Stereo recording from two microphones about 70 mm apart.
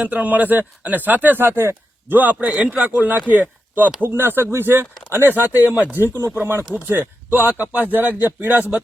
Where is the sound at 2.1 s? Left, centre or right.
Right.